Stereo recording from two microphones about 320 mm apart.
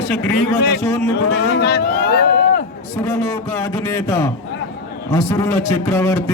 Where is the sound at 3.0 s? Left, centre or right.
Centre.